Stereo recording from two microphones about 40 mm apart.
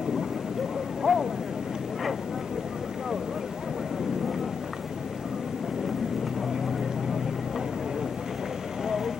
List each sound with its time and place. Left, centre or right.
1.1 s vehicle: centre
8.8 s vehicle: centre